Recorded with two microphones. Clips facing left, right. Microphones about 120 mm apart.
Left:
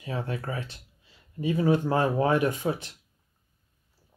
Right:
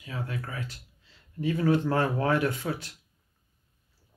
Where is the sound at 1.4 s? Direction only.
15° left (ahead or behind).